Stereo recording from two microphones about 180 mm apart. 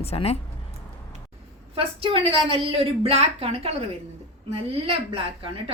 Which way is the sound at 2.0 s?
30° right (ahead or behind).